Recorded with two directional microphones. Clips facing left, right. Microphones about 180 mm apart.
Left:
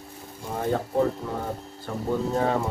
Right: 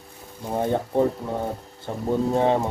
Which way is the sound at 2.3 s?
25° right (ahead or behind).